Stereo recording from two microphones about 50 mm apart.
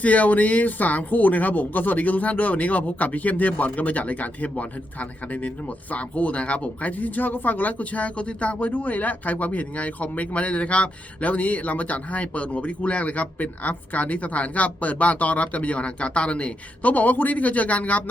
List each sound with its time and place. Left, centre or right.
0.0 s speech: left